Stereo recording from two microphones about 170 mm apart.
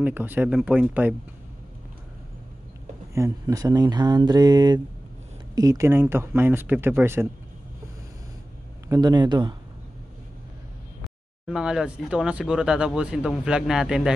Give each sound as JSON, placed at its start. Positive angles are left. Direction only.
{"t": 0.0, "sound": "speech", "side_deg": -10}
{"t": 3.2, "sound": "speech", "side_deg": -20}
{"t": 8.8, "sound": "speech", "side_deg": -20}
{"t": 11.4, "sound": "speech", "side_deg": -5}